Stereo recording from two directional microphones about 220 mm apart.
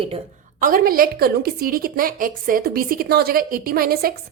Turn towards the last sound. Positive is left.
turn(degrees=-45)  # may be behind; listen again after turning